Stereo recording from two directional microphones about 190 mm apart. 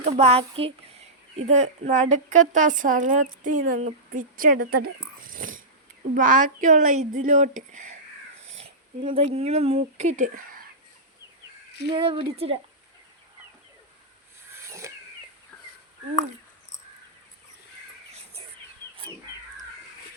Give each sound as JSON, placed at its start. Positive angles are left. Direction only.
{"t": 0.0, "sound": "speech", "side_deg": -35}
{"t": 9.1, "sound": "speech", "side_deg": -35}
{"t": 11.9, "sound": "speech", "side_deg": -25}
{"t": 14.5, "sound": "a sound", "side_deg": -15}